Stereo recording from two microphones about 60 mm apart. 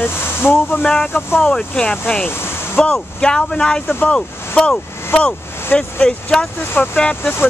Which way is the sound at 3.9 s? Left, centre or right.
Left.